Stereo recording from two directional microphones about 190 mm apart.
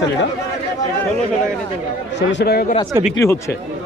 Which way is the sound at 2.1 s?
60° left (ahead or behind).